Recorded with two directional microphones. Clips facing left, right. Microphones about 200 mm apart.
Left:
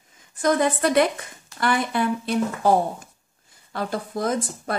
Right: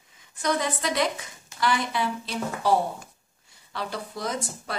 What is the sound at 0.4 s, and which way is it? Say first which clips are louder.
Speech: left 7 dB; 50° left (ahead or behind).